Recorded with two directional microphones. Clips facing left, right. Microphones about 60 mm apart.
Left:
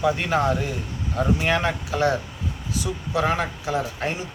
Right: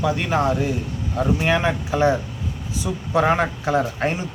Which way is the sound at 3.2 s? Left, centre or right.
Right.